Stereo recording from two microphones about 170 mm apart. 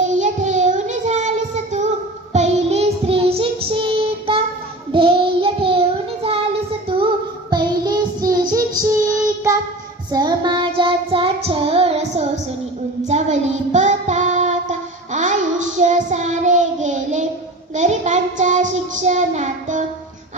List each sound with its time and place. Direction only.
0.2 s child singing: 45° right (ahead or behind)
6.9 s music: 30° right (ahead or behind)
7.5 s child singing: 25° right (ahead or behind); by 19.8 s 45° right (ahead or behind)